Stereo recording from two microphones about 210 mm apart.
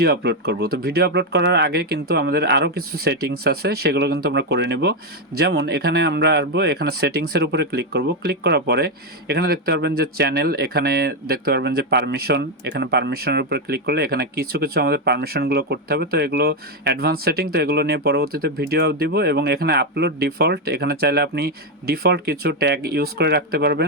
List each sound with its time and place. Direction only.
0.0 s speech: 50° right (ahead or behind)